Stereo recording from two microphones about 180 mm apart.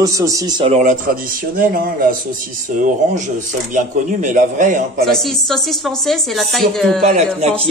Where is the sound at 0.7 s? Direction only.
45° right (ahead or behind).